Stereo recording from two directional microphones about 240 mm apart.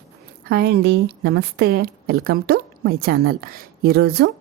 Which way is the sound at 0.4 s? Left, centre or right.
Right.